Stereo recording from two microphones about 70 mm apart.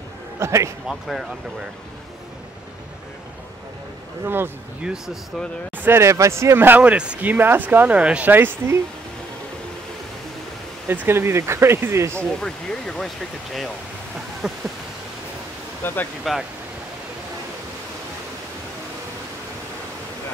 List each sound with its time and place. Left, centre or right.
0.4 s a man's voice: right
0.8 s speech: centre
4.2 s speech: right
4.8 s speech: centre
5.8 s speech: right
6.8 s speech: centre
8.3 s speech: right
10.9 s speech: right
12.2 s speech: centre
14.4 s a sound: centre
15.8 s speech: left